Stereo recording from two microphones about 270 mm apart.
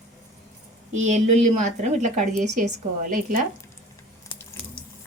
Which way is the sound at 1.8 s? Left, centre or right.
Right.